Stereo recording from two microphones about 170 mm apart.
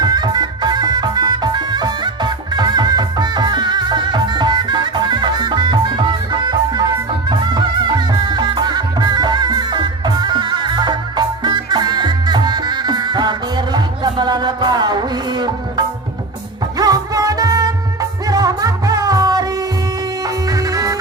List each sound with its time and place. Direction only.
0.0 s music: 25° right (ahead or behind)
7.3 s music: 25° right (ahead or behind)
16.7 s music: 20° right (ahead or behind)